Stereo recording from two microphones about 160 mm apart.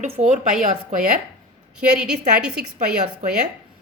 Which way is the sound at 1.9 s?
5° right (ahead or behind).